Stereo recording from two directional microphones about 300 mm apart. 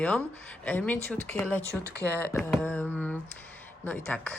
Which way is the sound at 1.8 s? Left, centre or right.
Left.